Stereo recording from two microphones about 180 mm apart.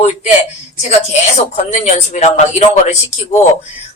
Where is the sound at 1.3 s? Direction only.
40° left (ahead or behind).